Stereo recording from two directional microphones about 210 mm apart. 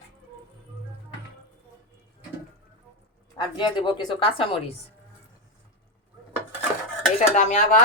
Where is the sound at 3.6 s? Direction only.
20° left (ahead or behind).